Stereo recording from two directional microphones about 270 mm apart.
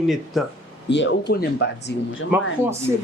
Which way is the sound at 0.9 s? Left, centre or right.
Left.